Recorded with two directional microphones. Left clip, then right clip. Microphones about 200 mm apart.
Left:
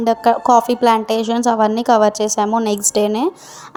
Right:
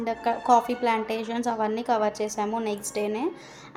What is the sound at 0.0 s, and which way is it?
A woman's voice, 40° left (ahead or behind).